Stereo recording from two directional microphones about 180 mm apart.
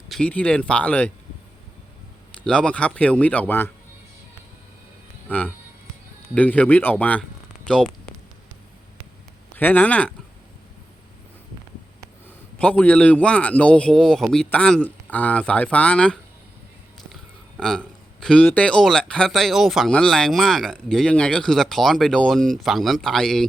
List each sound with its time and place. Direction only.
0.1 s a man's voice: 5° left (ahead or behind)
2.4 s a man's voice: 5° left (ahead or behind)
6.3 s speech: 10° left (ahead or behind)
9.6 s a man's voice: 10° left (ahead or behind)
12.5 s a man's voice: 5° left (ahead or behind)
17.6 s speech: 5° left (ahead or behind)